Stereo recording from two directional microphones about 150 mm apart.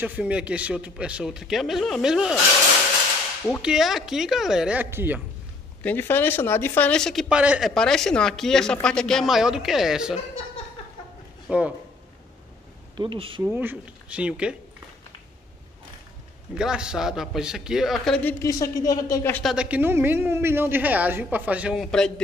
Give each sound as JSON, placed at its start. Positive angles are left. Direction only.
{"t": 0.0, "sound": "a woman's voice", "side_deg": -10}
{"t": 3.6, "sound": "a woman's voice", "side_deg": -5}
{"t": 5.8, "sound": "a woman's voice", "side_deg": 15}
{"t": 7.7, "sound": "speech", "side_deg": 5}
{"t": 11.4, "sound": "speech", "side_deg": -10}
{"t": 12.9, "sound": "speech", "side_deg": -35}
{"t": 13.4, "sound": "a woman's voice", "side_deg": -15}
{"t": 16.5, "sound": "speech", "side_deg": -5}
{"t": 18.4, "sound": "speech", "side_deg": 20}
{"t": 19.4, "sound": "a woman's voice", "side_deg": -5}
{"t": 21.9, "sound": "speech", "side_deg": 5}